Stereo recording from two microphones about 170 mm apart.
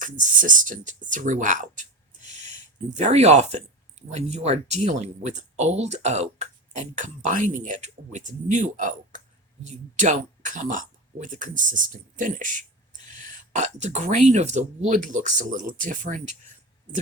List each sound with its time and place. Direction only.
0.0 s speech: 50° right (ahead or behind)
1.1 s a sound: 50° right (ahead or behind)
2.9 s speech: 40° right (ahead or behind)